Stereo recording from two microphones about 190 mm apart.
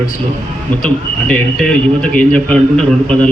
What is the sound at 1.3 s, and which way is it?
A man's voice, 5° left (ahead or behind).